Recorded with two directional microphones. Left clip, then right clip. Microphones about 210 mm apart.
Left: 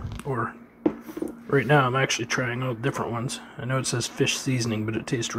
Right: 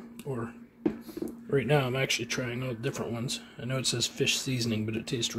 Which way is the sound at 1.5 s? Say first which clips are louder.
Left 6 dB; 5° right (ahead or behind).